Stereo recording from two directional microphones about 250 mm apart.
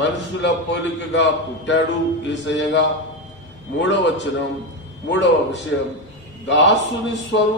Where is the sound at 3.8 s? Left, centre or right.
Left.